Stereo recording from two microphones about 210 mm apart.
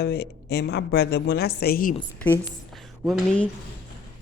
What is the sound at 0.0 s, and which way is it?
A woman's voice, 50° left (ahead or behind).